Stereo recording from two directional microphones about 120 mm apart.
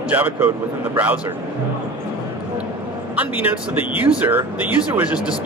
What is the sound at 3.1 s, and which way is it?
A man's voice, 15° right (ahead or behind).